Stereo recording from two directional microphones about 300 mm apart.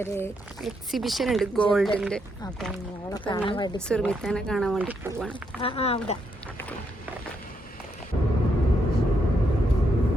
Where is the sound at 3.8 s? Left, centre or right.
Centre.